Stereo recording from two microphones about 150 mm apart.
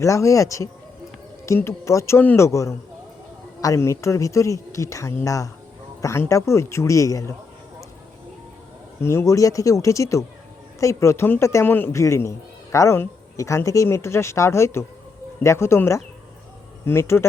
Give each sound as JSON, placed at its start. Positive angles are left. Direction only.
{"t": 0.0, "sound": "speech", "side_deg": 20}
{"t": 9.0, "sound": "speech", "side_deg": 20}